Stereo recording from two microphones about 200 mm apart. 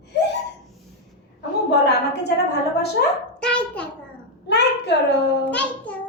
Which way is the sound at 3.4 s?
5° left (ahead or behind).